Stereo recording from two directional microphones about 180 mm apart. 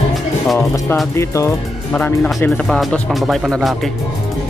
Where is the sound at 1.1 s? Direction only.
15° left (ahead or behind); by 3.7 s centre (ahead or behind).